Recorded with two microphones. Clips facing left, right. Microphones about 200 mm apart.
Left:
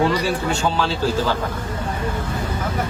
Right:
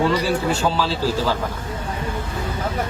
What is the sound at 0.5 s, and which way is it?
Speech, centre (ahead or behind).